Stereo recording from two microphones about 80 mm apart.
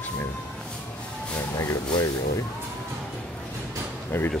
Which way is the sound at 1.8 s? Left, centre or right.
Left.